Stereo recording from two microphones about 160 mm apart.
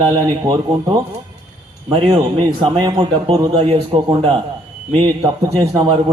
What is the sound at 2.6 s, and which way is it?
Speech, 30° right (ahead or behind).